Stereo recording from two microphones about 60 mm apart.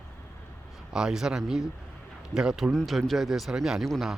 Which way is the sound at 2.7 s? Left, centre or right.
Centre.